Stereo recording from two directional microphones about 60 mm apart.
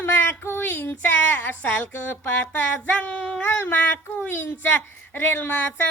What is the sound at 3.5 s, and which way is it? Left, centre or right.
Speech, left.